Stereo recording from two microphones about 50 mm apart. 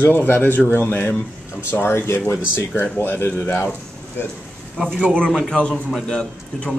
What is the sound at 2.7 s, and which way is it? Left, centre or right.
Speech, left.